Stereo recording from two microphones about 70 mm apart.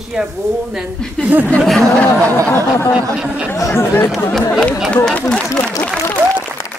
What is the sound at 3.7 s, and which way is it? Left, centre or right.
Speech, left.